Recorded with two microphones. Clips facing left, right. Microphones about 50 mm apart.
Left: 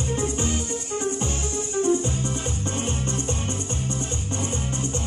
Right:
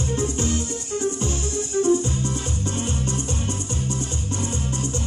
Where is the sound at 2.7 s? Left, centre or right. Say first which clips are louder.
Right 1 dB; left.